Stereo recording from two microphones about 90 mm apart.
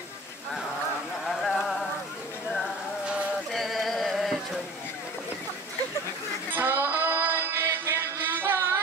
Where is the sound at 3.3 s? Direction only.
Centre (ahead or behind).